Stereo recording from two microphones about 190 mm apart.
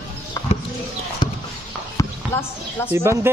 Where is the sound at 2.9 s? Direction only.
15° right (ahead or behind).